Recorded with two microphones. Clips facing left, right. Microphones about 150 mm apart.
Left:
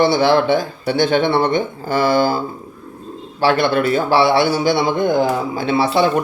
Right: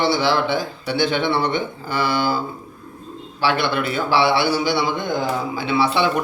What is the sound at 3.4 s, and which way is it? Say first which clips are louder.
A man's voice: left 5 dB; 45° left (ahead or behind).